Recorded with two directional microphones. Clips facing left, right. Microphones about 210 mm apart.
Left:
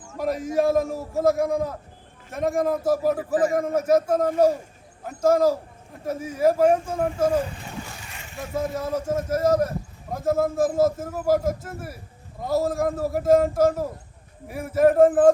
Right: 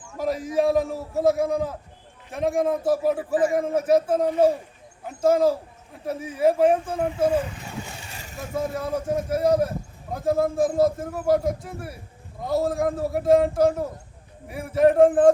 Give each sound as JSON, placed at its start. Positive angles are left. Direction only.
{"t": 0.2, "sound": "a man's voice", "side_deg": 0}
{"t": 8.1, "sound": "a sound", "side_deg": -35}
{"t": 8.5, "sound": "a man's voice", "side_deg": 0}